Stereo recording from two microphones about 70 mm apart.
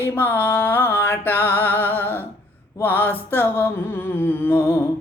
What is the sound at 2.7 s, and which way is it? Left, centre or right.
Mantra, left.